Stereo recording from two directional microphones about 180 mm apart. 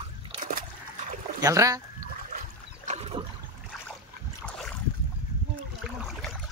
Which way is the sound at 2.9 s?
35° right (ahead or behind).